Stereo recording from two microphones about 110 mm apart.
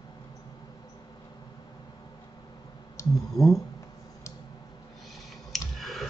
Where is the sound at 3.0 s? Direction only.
30° left (ahead or behind).